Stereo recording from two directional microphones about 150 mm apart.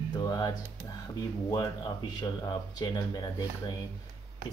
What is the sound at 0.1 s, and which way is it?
Speech, 25° left (ahead or behind).